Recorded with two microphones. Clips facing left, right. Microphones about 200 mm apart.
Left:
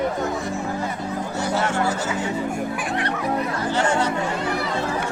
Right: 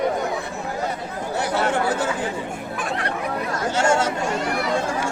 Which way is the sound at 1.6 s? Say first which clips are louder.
Right 2 dB; 60° right (ahead or behind).